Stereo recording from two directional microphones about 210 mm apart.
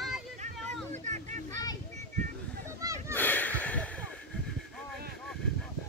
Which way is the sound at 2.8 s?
15° right (ahead or behind).